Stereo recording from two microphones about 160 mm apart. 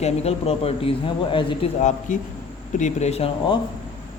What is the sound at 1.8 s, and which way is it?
A man's voice, 45° left (ahead or behind).